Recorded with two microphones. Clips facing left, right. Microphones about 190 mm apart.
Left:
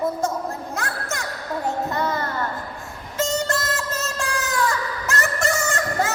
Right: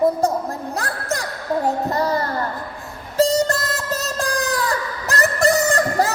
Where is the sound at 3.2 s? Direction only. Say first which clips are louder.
Right 6 dB; 35° right (ahead or behind).